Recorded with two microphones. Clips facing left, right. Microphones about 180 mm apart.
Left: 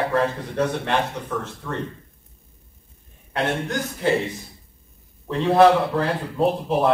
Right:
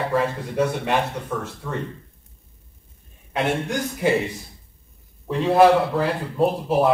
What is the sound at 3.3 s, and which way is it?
Speech, 10° right (ahead or behind).